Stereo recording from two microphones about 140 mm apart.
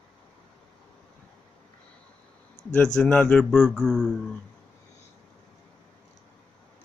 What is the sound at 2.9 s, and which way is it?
Speech, 5° left (ahead or behind).